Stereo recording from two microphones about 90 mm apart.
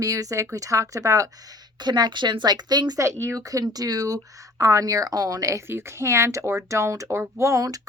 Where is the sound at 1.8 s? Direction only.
55° right (ahead or behind).